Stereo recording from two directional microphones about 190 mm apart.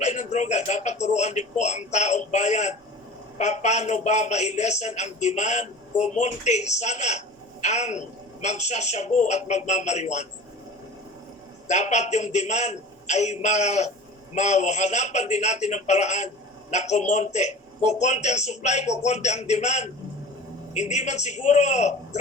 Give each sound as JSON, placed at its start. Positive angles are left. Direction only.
{"t": 0.0, "sound": "a man's voice", "side_deg": 35}
{"t": 11.7, "sound": "a man's voice", "side_deg": 35}